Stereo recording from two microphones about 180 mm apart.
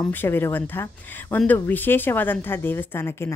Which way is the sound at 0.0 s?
10° left (ahead or behind).